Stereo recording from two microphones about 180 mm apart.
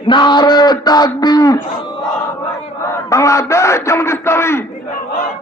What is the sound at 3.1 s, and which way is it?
A man's voice, 15° left (ahead or behind).